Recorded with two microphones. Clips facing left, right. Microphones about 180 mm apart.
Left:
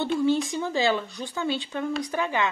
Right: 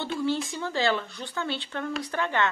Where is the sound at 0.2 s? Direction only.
15° left (ahead or behind).